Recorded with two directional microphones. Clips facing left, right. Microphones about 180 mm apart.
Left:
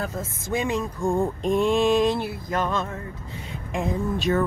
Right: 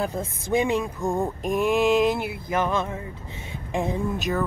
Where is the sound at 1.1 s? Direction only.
Centre (ahead or behind).